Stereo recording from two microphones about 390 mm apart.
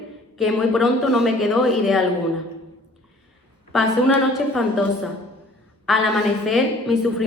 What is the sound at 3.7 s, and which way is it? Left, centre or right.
Speech, centre.